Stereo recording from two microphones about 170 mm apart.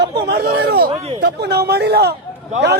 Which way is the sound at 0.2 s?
80° right.